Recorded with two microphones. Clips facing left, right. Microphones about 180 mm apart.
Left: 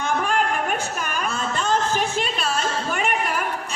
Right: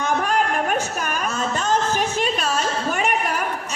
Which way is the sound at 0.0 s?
40° right (ahead or behind).